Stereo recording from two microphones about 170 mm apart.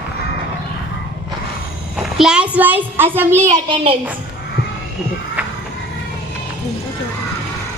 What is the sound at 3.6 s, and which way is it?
Speech, 30° right (ahead or behind).